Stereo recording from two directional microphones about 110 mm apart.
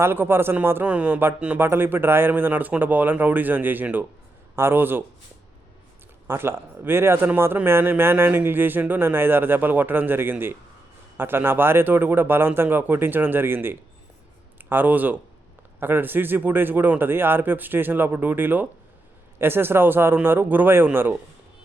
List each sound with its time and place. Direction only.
0.0 s a man's voice: 20° right (ahead or behind)
6.2 s a man's voice: 20° right (ahead or behind)